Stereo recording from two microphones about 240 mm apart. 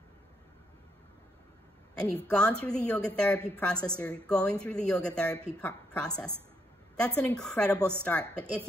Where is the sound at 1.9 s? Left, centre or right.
Centre.